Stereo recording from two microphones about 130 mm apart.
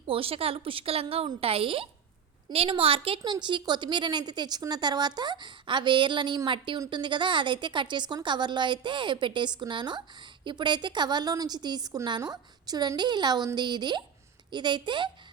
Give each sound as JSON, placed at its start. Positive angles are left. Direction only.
{"t": 0.1, "sound": "a woman's voice", "side_deg": -45}